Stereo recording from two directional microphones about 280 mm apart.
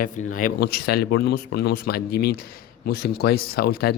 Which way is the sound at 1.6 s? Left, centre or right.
Left.